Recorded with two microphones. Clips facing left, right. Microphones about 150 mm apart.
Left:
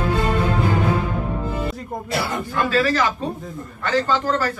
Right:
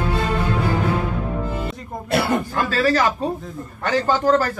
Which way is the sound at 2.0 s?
60° right (ahead or behind).